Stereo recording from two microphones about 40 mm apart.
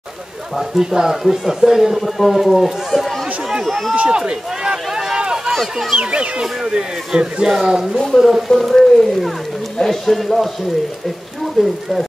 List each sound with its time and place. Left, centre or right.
0.6 s speech: centre
3.9 s a man's voice: right
5.5 s speech: centre
5.9 s a man's voice: right; by 8.5 s centre
8.5 s speech: centre
11.6 s speech: centre